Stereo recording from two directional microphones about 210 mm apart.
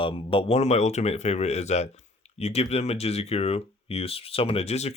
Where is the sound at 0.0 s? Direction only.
25° left (ahead or behind).